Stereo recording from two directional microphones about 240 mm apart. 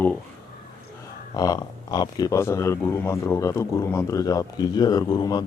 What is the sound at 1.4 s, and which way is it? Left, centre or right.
Speech, centre.